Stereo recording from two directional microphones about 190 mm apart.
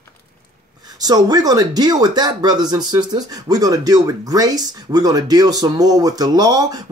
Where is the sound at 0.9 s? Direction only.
20° right (ahead or behind).